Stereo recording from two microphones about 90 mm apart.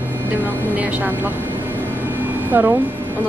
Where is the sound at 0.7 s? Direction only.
15° right (ahead or behind).